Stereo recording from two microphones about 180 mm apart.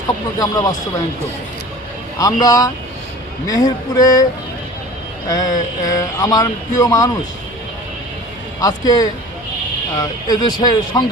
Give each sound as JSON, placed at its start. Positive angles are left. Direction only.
{"t": 0.3, "sound": "speech", "side_deg": 20}
{"t": 2.1, "sound": "speech", "side_deg": 20}
{"t": 5.3, "sound": "speech", "side_deg": 20}
{"t": 8.6, "sound": "speech", "side_deg": 20}